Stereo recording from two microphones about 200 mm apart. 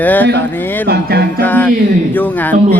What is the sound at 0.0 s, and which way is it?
Speech, 10° left (ahead or behind).